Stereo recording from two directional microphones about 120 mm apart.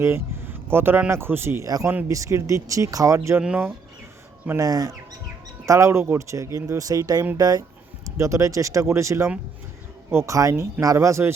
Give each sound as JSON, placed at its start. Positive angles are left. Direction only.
{"t": 0.0, "sound": "speech", "side_deg": -20}
{"t": 3.4, "sound": "speech", "side_deg": -10}
{"t": 4.4, "sound": "speech", "side_deg": -25}